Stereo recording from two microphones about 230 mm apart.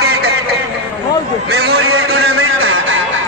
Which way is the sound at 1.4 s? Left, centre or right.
Right.